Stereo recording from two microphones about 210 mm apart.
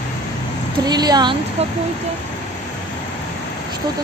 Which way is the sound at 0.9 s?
20° right (ahead or behind).